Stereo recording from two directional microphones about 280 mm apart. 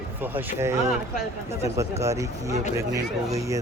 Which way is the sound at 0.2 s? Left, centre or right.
Centre.